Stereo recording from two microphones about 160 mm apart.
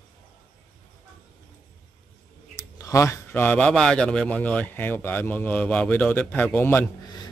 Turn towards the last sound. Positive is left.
turn(degrees=20)  # may be behind; listen again after turning